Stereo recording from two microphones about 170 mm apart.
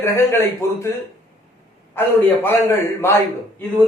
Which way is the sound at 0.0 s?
15° left (ahead or behind).